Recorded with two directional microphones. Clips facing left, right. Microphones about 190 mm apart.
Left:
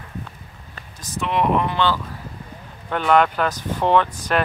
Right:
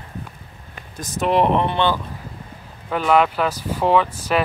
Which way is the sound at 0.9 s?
45° right (ahead or behind).